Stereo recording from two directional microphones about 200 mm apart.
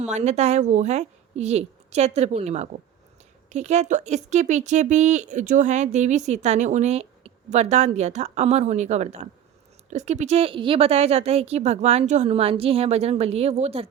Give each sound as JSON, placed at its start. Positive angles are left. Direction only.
{"t": 0.0, "sound": "a woman's voice", "side_deg": -35}